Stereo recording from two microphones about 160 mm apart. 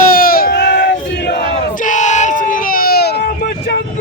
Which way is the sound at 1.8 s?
50° left (ahead or behind).